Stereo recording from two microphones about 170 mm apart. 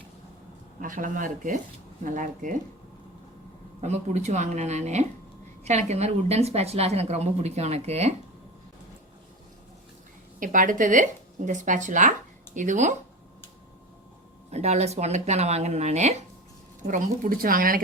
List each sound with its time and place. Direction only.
0.8 s speech: 50° right (ahead or behind)
3.8 s a woman's voice: 40° right (ahead or behind)
10.4 s speech: 50° right (ahead or behind)
14.5 s a woman's voice: 40° right (ahead or behind)
16.8 s speech: 50° right (ahead or behind)